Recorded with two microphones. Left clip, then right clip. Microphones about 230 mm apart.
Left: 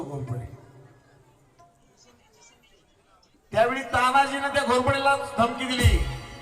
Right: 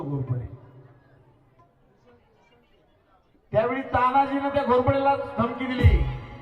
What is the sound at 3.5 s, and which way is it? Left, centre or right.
A man's voice, left.